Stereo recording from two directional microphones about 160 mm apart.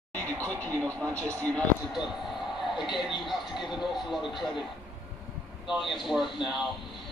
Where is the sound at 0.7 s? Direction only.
20° right (ahead or behind).